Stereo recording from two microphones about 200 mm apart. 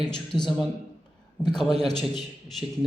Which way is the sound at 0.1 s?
20° left (ahead or behind).